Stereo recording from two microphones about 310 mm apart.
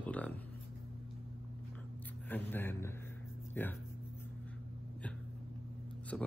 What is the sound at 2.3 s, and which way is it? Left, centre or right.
Speech, centre.